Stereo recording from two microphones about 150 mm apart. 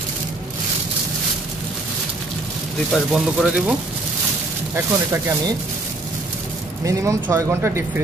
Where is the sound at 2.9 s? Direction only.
Centre (ahead or behind).